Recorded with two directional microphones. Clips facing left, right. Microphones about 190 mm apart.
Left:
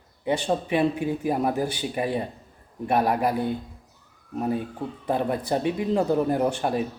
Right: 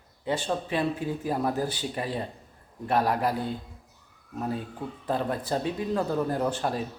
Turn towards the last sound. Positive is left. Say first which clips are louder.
# left 4 dB
turn(degrees=15)  # may be behind; listen again after turning